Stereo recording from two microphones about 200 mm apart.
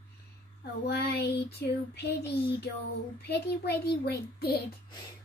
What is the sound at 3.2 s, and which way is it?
Child singing, 55° left (ahead or behind).